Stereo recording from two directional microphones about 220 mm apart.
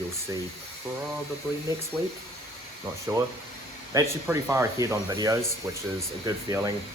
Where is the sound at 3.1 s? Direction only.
15° right (ahead or behind).